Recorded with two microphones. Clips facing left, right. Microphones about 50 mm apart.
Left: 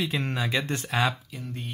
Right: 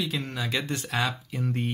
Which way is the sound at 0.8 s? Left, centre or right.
Centre.